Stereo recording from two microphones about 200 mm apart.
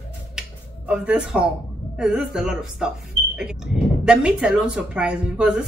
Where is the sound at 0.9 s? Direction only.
5° right (ahead or behind).